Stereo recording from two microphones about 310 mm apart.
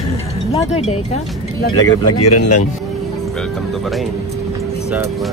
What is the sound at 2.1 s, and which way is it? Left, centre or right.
Speech, left.